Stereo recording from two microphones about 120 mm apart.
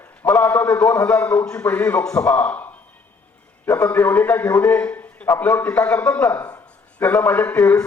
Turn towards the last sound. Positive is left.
turn(degrees=15)  # may be behind; listen again after turning